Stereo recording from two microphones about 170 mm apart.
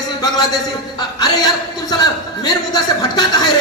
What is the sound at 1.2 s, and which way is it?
A man's voice, 25° left (ahead or behind).